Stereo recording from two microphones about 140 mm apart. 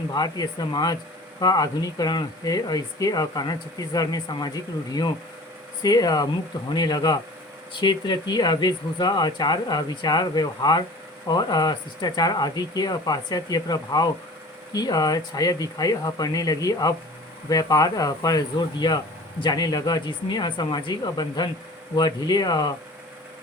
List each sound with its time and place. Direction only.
0.1 s speech: 30° left (ahead or behind)